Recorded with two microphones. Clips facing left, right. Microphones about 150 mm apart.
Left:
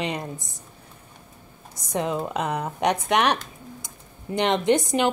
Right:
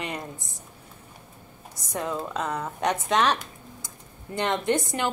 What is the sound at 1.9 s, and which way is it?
Speech, 20° left (ahead or behind).